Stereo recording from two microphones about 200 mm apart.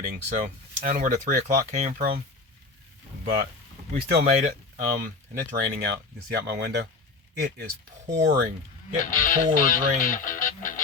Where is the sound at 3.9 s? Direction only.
55° right (ahead or behind).